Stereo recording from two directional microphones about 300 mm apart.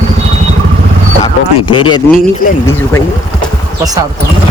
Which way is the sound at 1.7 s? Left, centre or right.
Centre.